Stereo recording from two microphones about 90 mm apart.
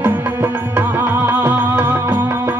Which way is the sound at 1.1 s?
25° right (ahead or behind).